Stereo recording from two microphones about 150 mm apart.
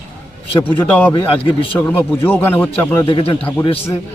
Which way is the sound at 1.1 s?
35° left (ahead or behind).